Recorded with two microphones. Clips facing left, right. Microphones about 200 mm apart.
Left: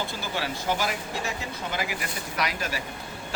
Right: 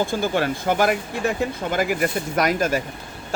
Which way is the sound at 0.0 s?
50° right (ahead or behind).